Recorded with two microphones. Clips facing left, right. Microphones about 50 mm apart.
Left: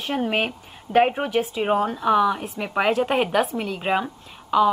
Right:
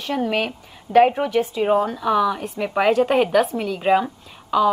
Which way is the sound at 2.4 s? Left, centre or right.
Centre.